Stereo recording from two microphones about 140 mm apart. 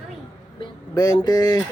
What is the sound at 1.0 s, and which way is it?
Speech, 25° left (ahead or behind).